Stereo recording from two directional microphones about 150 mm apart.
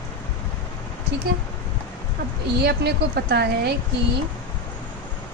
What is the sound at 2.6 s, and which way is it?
A woman's voice, 90° right.